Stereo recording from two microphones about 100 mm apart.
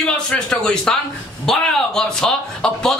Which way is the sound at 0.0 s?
10° left (ahead or behind).